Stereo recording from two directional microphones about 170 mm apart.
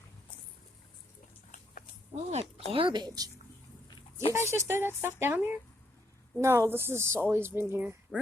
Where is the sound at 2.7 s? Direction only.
30° right (ahead or behind).